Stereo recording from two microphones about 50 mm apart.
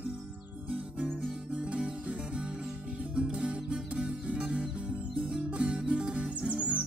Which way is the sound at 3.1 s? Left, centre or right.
Right.